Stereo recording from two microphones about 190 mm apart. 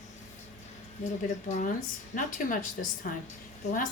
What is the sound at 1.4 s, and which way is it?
Speech, 40° left (ahead or behind).